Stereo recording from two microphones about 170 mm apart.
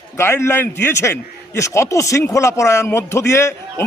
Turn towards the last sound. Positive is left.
turn(degrees=15)  # may be behind; listen again after turning